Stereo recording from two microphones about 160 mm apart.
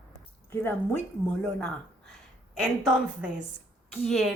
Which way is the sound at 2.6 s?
5° right (ahead or behind).